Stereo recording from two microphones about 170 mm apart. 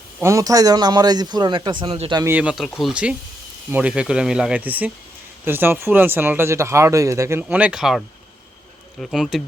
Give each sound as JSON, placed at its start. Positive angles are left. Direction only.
{"t": 0.2, "sound": "a man's voice", "side_deg": -20}
{"t": 2.2, "sound": "speech", "side_deg": -10}